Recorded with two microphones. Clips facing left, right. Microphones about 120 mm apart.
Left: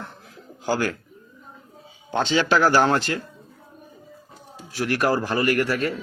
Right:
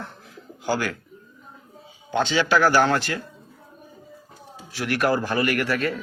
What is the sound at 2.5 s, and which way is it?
Speech, 35° left (ahead or behind).